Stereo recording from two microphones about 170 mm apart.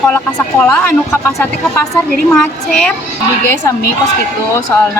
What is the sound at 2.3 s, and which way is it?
Speech, 5° left (ahead or behind).